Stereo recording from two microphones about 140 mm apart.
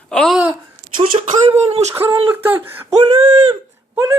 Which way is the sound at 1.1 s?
40° right (ahead or behind).